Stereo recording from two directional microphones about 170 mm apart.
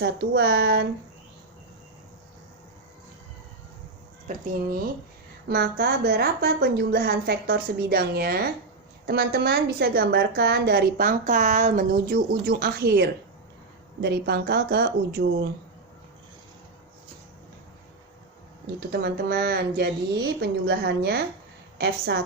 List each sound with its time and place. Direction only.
0.0 s a woman's voice: 70° right (ahead or behind)
4.3 s speech: 50° right (ahead or behind)
5.5 s a woman's voice: 70° right (ahead or behind)
18.8 s a woman's voice: 70° right (ahead or behind)